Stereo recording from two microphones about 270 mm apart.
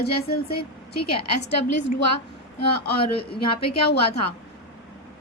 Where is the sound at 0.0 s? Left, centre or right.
Left.